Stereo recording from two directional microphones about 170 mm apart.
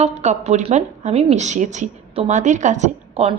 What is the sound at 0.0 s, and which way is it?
A woman's voice, 40° right (ahead or behind).